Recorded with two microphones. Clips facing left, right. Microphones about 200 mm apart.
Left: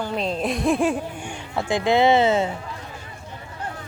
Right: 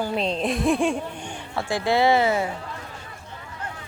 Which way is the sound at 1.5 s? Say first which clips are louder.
Left 3 dB; 20° left (ahead or behind).